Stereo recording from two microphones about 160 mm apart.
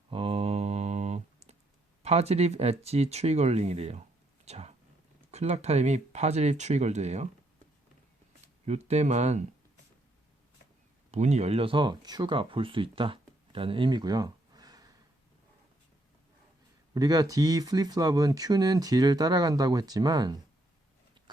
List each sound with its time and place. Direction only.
0.1 s a sound: 35° right (ahead or behind)
2.0 s speech: 40° right (ahead or behind)
4.4 s a sound: 40° right (ahead or behind)
5.3 s speech: 40° right (ahead or behind)
8.6 s speech: 45° right (ahead or behind)
11.1 s speech: 45° right (ahead or behind); by 14.8 s 25° right (ahead or behind)
16.9 s speech: 25° right (ahead or behind)